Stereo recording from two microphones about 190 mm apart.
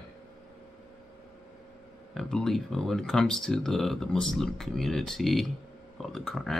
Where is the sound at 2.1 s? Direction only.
Centre (ahead or behind).